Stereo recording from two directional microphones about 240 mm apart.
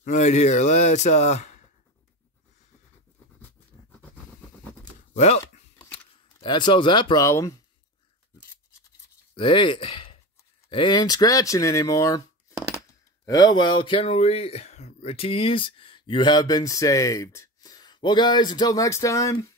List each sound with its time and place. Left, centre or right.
0.0 s speech: left
5.1 s speech: left
5.4 s typing: centre
9.3 s speech: left